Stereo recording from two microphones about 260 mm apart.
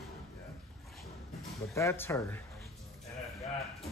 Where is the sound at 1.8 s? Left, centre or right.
Centre.